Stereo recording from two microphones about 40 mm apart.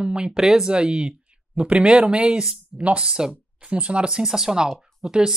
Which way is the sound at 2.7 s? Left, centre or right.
Right.